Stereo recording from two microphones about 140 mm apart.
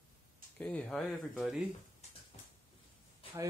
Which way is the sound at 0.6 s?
10° left (ahead or behind).